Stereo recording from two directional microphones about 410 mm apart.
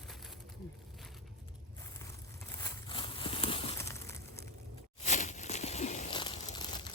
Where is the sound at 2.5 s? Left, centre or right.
Centre.